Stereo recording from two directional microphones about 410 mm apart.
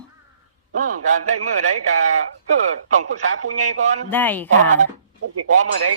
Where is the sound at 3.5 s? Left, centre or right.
Centre.